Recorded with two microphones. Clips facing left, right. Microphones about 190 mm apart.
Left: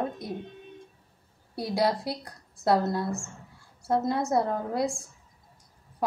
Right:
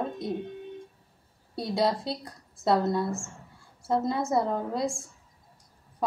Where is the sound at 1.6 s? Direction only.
Centre (ahead or behind).